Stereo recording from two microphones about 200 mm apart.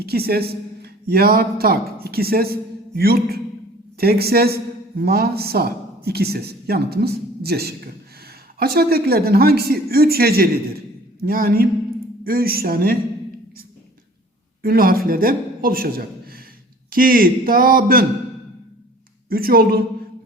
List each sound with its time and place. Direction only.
0.0 s a man's voice: 50° right (ahead or behind)
14.6 s a man's voice: 45° right (ahead or behind)
19.3 s speech: 50° right (ahead or behind)